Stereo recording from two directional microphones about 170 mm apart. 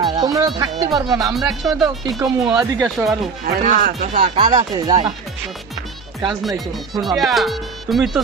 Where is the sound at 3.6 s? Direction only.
50° right (ahead or behind).